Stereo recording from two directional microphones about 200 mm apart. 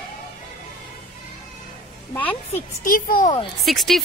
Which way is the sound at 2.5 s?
45° left (ahead or behind).